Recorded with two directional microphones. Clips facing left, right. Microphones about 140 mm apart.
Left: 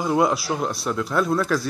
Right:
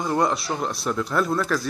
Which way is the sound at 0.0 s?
5° left (ahead or behind).